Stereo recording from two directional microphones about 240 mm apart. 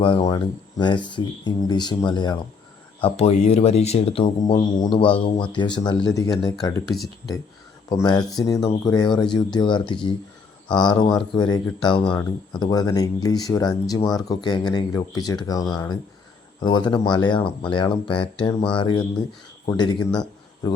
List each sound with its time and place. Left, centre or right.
0.0 s speech: left